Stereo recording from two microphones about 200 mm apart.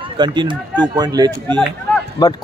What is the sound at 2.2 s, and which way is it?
Speech, 20° left (ahead or behind).